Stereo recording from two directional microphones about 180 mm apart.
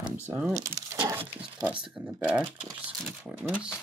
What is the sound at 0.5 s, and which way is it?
Speech, 20° right (ahead or behind).